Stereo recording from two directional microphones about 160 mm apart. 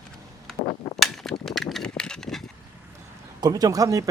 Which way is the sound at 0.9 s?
Centre (ahead or behind).